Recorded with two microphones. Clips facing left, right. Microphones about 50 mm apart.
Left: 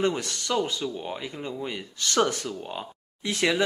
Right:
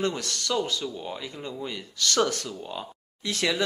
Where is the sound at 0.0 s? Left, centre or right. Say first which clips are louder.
Left 2 dB; centre.